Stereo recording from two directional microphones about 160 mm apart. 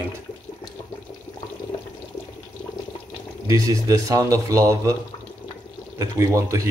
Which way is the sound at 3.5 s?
20° right (ahead or behind).